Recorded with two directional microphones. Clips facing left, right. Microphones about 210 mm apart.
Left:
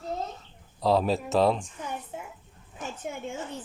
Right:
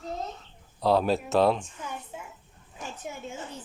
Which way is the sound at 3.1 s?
60° left (ahead or behind).